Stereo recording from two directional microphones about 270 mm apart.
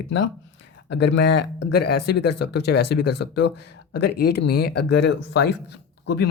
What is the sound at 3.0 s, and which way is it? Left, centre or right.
Speech, left.